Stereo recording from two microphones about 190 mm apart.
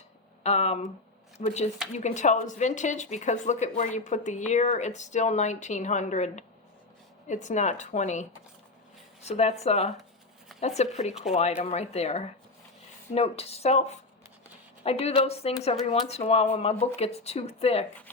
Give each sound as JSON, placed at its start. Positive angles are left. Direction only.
{"t": 0.4, "sound": "speech", "side_deg": 35}